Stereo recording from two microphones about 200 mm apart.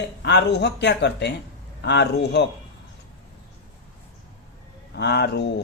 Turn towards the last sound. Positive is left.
turn(degrees=55)  # may be behind; listen again after turning